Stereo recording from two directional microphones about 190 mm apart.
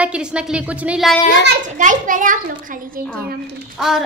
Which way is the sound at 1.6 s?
40° right (ahead or behind).